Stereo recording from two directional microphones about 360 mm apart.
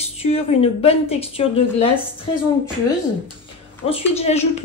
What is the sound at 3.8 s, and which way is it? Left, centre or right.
Speech, centre.